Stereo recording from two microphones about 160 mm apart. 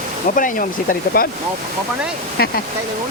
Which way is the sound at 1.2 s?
65° left (ahead or behind).